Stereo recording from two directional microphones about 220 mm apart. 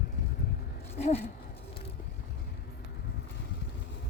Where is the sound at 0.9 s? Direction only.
30° left (ahead or behind).